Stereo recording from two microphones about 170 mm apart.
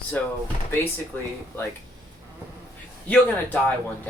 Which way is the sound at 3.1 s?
10° left (ahead or behind).